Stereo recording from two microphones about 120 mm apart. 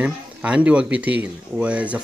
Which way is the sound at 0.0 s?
10° right (ahead or behind).